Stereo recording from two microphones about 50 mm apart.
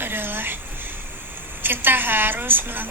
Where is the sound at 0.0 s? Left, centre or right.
Right.